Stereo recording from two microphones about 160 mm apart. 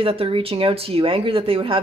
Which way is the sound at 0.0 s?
35° right (ahead or behind).